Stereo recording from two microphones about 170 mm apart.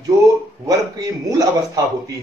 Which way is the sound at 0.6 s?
20° right (ahead or behind).